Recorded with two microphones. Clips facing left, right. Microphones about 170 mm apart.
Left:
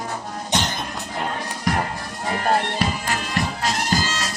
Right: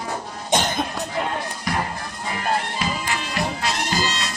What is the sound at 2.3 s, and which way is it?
Music, 45° left (ahead or behind).